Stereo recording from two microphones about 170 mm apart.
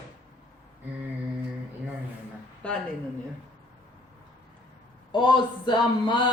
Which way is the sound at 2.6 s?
5° left (ahead or behind).